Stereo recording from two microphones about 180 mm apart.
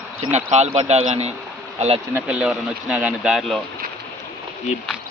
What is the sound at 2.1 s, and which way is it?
Speech, 5° right (ahead or behind).